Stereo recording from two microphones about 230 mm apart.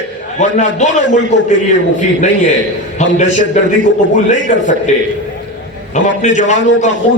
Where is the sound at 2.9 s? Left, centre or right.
Left.